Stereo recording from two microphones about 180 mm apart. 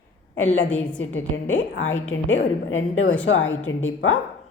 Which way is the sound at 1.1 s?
90° left.